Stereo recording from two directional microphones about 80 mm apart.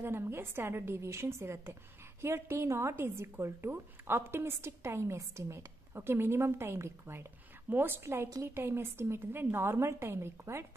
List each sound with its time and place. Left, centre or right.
0.0 s a woman's voice: right